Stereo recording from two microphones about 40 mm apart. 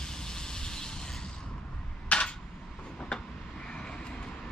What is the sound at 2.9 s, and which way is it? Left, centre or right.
Vehicle, left.